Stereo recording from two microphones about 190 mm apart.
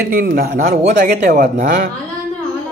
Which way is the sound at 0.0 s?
55° right (ahead or behind).